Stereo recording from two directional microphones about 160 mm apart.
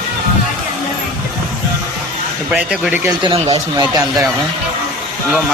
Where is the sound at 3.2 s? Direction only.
35° right (ahead or behind).